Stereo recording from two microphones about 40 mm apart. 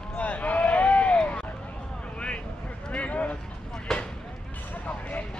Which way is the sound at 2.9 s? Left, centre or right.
Left.